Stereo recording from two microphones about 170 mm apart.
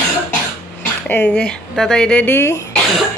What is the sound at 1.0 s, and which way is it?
A woman's voice, 10° left (ahead or behind).